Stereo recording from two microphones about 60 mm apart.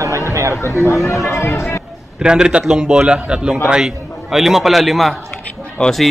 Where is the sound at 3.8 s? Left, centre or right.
Centre.